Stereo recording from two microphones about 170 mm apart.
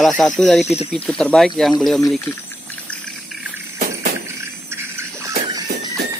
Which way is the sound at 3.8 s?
60° right (ahead or behind).